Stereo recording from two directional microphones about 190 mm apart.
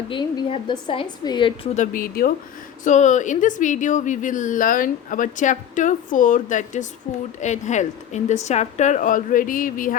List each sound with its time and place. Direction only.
0.1 s a woman's voice: 25° left (ahead or behind)
1.7 s a woman's voice: 45° left (ahead or behind)